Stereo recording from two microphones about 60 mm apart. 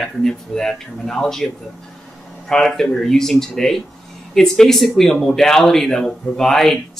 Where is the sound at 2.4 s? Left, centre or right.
Centre.